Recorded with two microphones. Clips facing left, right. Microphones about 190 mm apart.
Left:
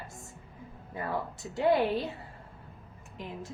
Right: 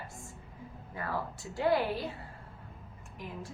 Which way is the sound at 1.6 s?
20° left (ahead or behind).